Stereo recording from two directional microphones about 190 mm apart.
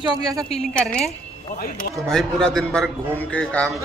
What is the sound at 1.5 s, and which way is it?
Speech, 50° left (ahead or behind).